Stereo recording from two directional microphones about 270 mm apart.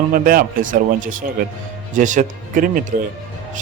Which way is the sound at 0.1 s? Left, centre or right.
Right.